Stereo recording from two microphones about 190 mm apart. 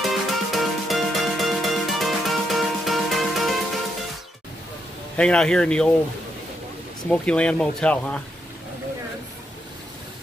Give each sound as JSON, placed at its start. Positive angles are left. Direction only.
{"t": 0.0, "sound": "music", "side_deg": 0}
{"t": 5.1, "sound": "speech", "side_deg": 5}
{"t": 7.1, "sound": "speech", "side_deg": 5}